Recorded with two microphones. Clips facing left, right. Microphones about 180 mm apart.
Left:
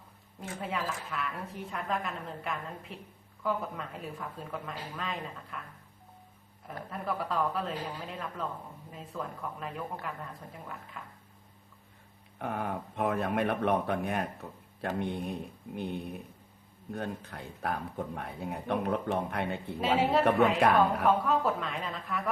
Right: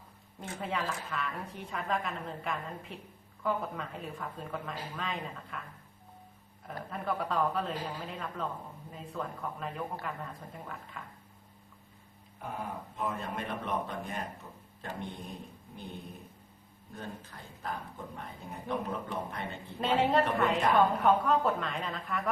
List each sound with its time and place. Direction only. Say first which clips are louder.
0.3 s a woman's voice: even; centre (ahead or behind)
6.7 s a woman's voice: even; centre (ahead or behind)
12.4 s speech: left 5 dB; 65° left (ahead or behind)
19.8 s a woman's voice: left 1 dB; 5° left (ahead or behind)